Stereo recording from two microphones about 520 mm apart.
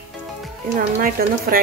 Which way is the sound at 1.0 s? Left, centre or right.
Centre.